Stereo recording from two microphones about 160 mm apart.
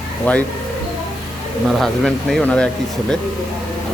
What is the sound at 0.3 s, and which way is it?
Speech, 10° left (ahead or behind).